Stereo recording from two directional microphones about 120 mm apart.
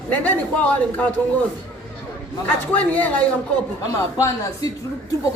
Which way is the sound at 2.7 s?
15° left (ahead or behind).